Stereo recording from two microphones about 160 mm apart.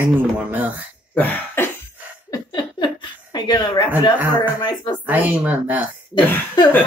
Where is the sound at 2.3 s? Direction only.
25° left (ahead or behind).